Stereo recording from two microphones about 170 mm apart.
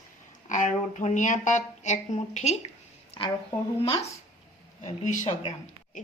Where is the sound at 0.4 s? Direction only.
45° left (ahead or behind).